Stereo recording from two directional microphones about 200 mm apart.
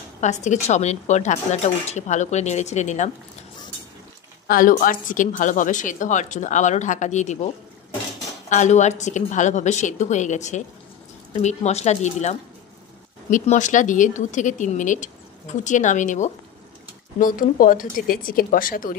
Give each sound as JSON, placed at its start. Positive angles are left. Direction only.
{"t": 0.2, "sound": "speech", "side_deg": 35}
{"t": 4.5, "sound": "speech", "side_deg": 45}
{"t": 8.5, "sound": "speech", "side_deg": 35}